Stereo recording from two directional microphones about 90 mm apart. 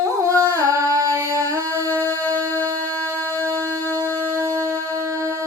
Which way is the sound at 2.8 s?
25° left (ahead or behind).